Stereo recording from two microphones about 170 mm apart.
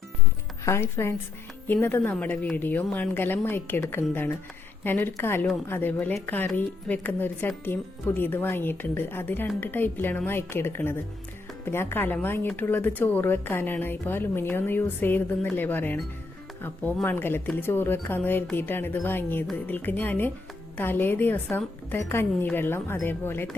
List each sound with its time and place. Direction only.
0.6 s speech: 15° left (ahead or behind)